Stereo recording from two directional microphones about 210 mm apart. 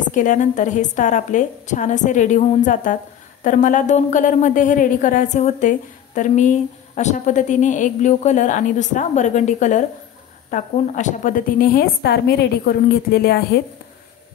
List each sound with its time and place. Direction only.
0.1 s a woman's voice: 35° left (ahead or behind)